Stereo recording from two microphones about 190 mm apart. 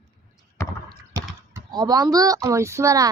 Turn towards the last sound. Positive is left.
turn(degrees=-15)  # may be behind; listen again after turning